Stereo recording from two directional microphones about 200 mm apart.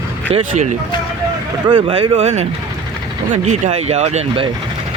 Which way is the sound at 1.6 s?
25° right (ahead or behind).